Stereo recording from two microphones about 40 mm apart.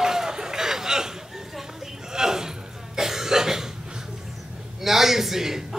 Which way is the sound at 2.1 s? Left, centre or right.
Centre.